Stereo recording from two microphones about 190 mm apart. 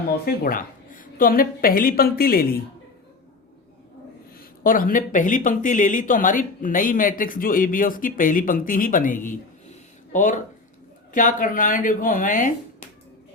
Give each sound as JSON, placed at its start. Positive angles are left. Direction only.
{"t": 0.4, "sound": "speech", "side_deg": 50}
{"t": 4.4, "sound": "speech", "side_deg": 45}